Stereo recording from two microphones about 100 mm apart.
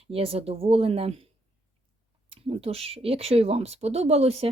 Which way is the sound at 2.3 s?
75° right (ahead or behind).